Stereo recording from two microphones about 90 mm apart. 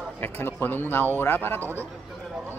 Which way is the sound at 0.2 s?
20° left (ahead or behind).